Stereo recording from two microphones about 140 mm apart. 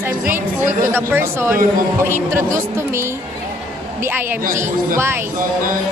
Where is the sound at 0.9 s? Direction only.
15° right (ahead or behind).